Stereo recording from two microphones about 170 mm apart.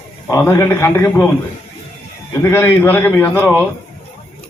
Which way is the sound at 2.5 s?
15° left (ahead or behind).